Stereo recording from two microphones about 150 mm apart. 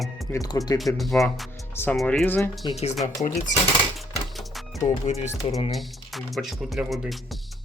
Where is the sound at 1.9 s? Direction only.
5° left (ahead or behind).